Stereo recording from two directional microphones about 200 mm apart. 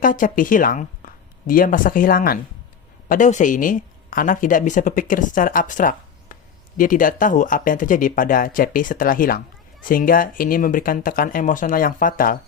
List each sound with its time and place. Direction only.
0.0 s speech: 40° left (ahead or behind)